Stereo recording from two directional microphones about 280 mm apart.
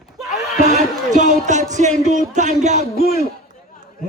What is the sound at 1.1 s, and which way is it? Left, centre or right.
Music, right.